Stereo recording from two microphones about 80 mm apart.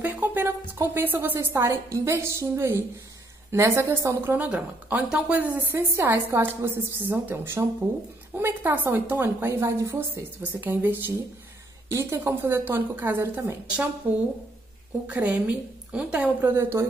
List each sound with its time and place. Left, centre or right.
0.0 s a sound: right
0.7 s a woman's voice: right; by 5.6 s centre
5.6 s a woman's voice: right
10.4 s a woman's voice: right
15.0 s a woman's voice: centre
16.3 s a woman's voice: right